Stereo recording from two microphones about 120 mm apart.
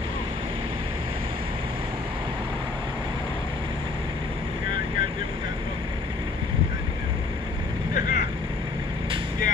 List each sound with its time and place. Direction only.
7.9 s vehicle: 90° left